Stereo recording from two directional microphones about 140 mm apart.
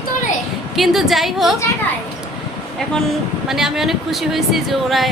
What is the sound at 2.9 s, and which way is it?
Speech, centre (ahead or behind).